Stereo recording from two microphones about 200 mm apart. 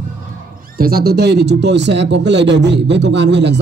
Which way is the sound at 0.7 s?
50° right (ahead or behind).